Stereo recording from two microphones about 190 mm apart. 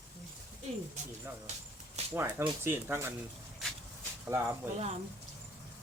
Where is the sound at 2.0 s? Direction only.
35° right (ahead or behind).